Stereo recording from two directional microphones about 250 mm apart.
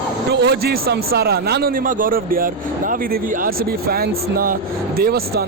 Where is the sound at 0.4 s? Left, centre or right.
Right.